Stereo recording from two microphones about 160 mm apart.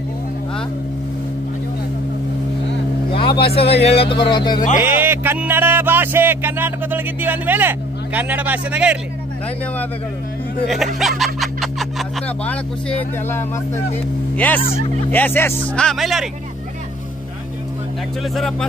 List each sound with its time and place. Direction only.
3.2 s speech: 35° left (ahead or behind)
4.7 s a sound: 10° right (ahead or behind)
11.0 s snicker: centre (ahead or behind)
14.3 s speech: 10° left (ahead or behind)
18.3 s speech: centre (ahead or behind)